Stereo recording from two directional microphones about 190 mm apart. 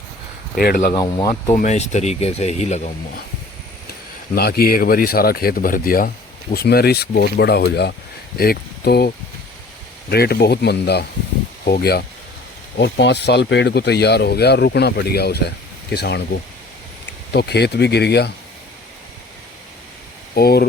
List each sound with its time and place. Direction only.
0.5 s speech: 55° left (ahead or behind)
0.9 s speech: 25° left (ahead or behind)
1.5 s speech: 40° left (ahead or behind)
4.4 s speech: 55° left (ahead or behind)
20.3 s speech: 55° left (ahead or behind)